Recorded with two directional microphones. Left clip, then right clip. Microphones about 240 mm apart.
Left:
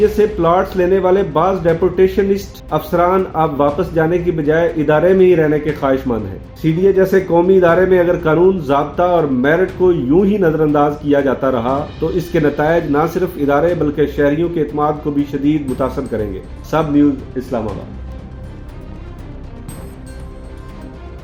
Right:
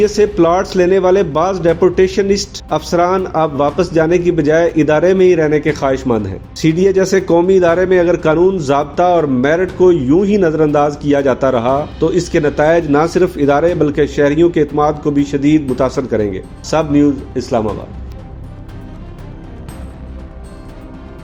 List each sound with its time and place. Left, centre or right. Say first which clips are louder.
0.2 s speech: right 1 dB; right